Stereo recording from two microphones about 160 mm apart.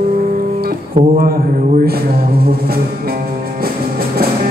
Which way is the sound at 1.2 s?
70° right (ahead or behind).